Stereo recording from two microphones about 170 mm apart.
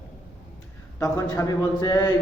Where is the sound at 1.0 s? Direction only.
20° left (ahead or behind).